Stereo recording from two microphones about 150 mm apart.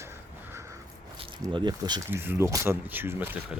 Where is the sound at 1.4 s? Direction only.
30° right (ahead or behind).